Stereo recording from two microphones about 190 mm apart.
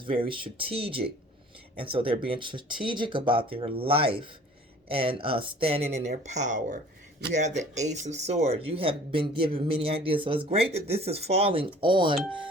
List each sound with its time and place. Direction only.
0.0 s speech: 25° right (ahead or behind)